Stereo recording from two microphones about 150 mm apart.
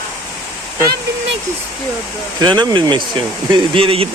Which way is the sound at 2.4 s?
30° right (ahead or behind).